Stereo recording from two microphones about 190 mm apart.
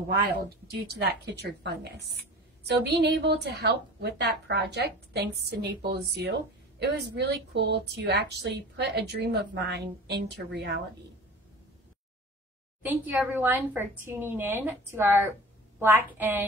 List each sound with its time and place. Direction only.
0.5 s speech: 55° right (ahead or behind)
12.8 s a woman's voice: 10° right (ahead or behind)